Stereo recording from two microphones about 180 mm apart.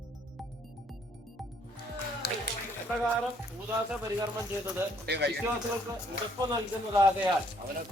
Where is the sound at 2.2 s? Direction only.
65° left (ahead or behind).